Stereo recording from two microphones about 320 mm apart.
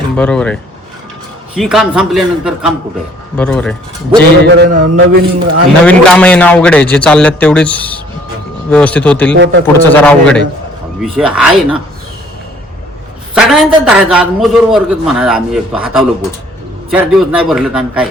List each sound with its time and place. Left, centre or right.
0.2 s a man's voice: centre
4.4 s a man's voice: right
5.8 s a man's voice: centre
9.4 s a man's voice: right
9.7 s a man's voice: centre
13.3 s a man's voice: centre